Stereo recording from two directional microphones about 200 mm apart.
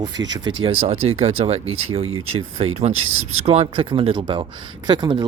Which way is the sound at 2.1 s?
90° right.